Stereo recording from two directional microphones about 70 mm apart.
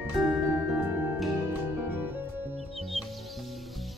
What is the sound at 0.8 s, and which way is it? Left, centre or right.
Music, right.